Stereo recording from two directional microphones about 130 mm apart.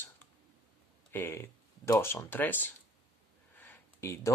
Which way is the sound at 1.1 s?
20° left (ahead or behind).